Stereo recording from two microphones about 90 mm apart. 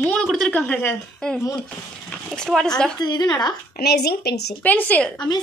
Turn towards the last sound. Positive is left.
turn(degrees=15)  # may be behind; listen again after turning